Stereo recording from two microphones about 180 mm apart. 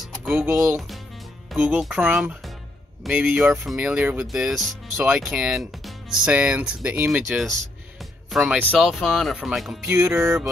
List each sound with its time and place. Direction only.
0.0 s music: centre (ahead or behind)
1.5 s speech: 5° right (ahead or behind)
9.8 s music: 10° right (ahead or behind)